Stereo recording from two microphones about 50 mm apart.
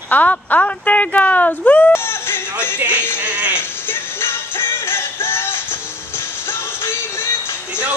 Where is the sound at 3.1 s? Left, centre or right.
Right.